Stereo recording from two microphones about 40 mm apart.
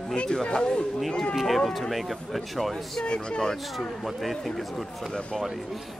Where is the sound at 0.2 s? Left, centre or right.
Left.